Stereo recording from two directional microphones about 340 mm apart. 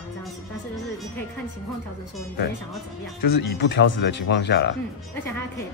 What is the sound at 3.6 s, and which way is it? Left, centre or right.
Speech, left.